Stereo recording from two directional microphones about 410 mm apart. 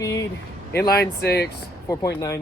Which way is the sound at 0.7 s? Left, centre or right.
Left.